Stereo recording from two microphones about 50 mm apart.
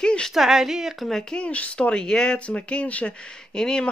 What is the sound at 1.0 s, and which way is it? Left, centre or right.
Speech, centre.